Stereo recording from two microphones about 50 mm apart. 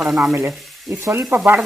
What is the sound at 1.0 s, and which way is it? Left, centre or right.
Speech, right.